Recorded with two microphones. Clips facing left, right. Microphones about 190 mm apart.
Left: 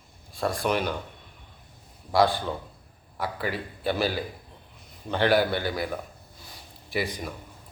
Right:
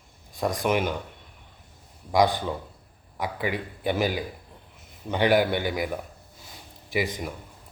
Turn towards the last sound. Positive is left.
turn(degrees=-15)  # may be behind; listen again after turning